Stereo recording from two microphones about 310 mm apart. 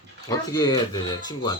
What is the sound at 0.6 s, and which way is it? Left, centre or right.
Speech, centre.